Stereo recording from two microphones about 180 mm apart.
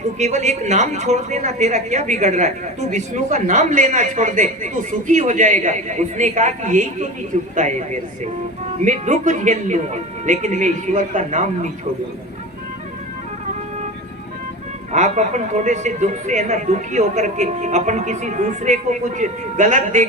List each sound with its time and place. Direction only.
0.2 s a man's voice: 40° right (ahead or behind)
14.9 s speech: 40° right (ahead or behind)